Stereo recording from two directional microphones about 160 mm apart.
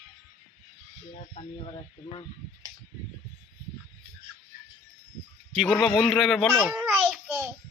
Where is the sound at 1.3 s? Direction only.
35° left (ahead or behind).